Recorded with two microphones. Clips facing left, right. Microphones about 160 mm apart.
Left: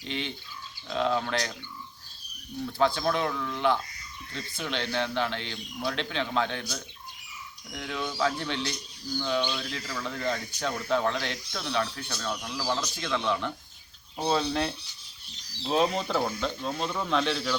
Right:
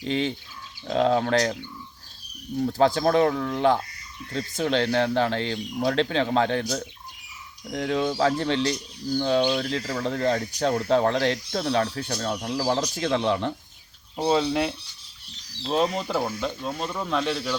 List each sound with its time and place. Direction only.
0.1 s speech: 40° right (ahead or behind)
2.6 s speech: 40° right (ahead or behind)
14.2 s speech: 15° right (ahead or behind)
15.6 s speech: centre (ahead or behind)